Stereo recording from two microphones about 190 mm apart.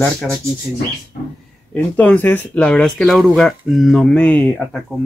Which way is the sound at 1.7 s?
10° left (ahead or behind).